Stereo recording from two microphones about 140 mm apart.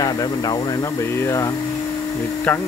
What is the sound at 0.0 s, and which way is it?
Speech, 30° left (ahead or behind).